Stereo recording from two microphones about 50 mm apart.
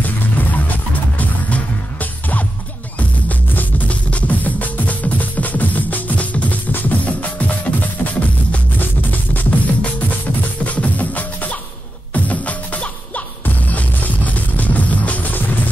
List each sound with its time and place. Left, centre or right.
1.1 s music: left